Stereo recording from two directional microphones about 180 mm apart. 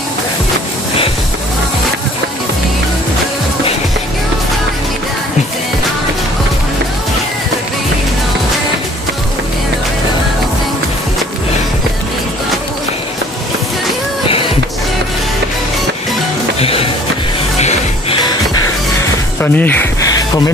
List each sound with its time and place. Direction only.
16.5 s music: 30° left (ahead or behind)
19.4 s speech: 10° left (ahead or behind)